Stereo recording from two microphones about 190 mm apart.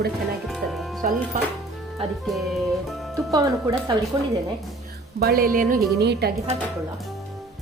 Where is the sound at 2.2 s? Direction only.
Centre (ahead or behind).